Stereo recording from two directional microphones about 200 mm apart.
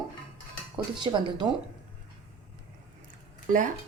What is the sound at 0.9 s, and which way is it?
Speech, 20° right (ahead or behind).